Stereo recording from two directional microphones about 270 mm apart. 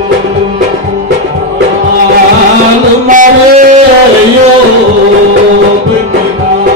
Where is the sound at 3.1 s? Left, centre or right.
Right.